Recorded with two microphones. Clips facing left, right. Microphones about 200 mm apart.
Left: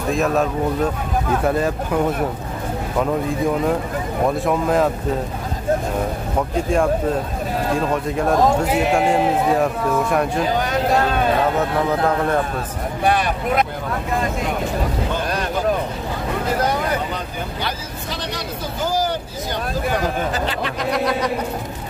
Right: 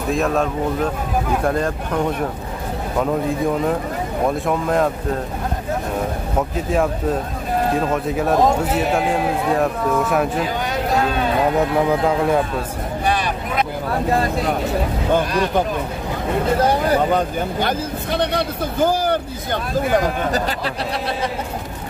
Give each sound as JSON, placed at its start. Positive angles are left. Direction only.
{"t": 0.1, "sound": "a man's voice", "side_deg": 0}
{"t": 4.5, "sound": "a man's voice", "side_deg": 0}
{"t": 6.5, "sound": "a man's voice", "side_deg": -5}
{"t": 12.0, "sound": "a man's voice", "side_deg": -10}
{"t": 13.0, "sound": "vehicle", "side_deg": 55}
{"t": 16.5, "sound": "vehicle", "side_deg": -30}
{"t": 17.1, "sound": "hubbub", "side_deg": -50}
{"t": 20.3, "sound": "speech", "side_deg": -35}